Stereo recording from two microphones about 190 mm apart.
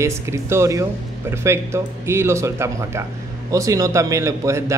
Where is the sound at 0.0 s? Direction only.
15° right (ahead or behind).